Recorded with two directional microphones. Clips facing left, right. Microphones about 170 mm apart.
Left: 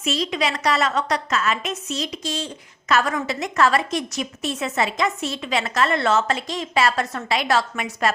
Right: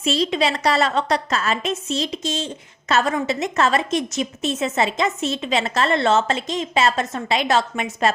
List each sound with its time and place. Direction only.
0.0 s a woman's voice: 30° right (ahead or behind)